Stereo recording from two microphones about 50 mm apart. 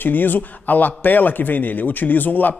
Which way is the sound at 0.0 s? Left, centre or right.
Left.